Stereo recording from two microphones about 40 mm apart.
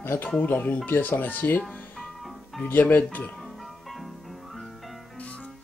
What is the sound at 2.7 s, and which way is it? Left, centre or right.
Speech, left.